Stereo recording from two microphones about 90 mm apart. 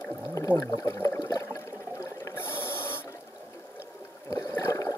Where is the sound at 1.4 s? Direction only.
35° left (ahead or behind).